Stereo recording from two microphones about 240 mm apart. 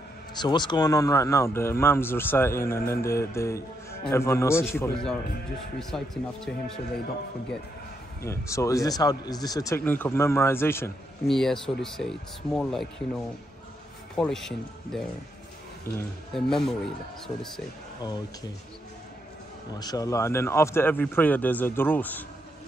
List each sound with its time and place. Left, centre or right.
0.3 s a man's voice: centre
8.3 s a man's voice: centre
19.8 s speech: centre